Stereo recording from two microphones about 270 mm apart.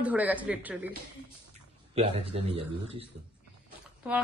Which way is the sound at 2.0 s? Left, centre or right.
Right.